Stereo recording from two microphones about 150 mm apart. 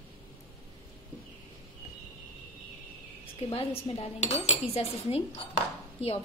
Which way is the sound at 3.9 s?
45° left (ahead or behind).